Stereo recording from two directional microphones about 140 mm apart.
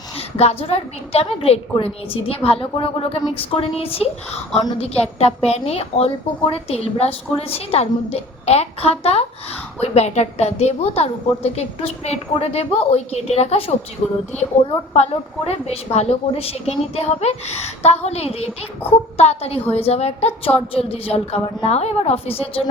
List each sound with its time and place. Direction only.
0.2 s a woman's voice: 45° left (ahead or behind)
14.9 s a woman's voice: 50° left (ahead or behind)